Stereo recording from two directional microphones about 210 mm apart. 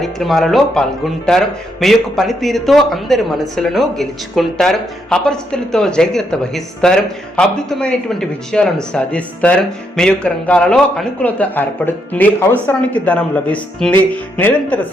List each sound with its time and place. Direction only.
0.0 s speech: centre (ahead or behind)